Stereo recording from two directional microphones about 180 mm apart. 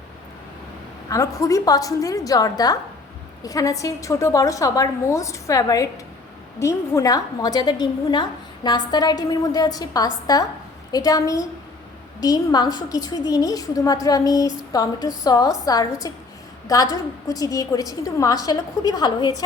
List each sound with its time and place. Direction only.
1.1 s a woman's voice: 20° left (ahead or behind)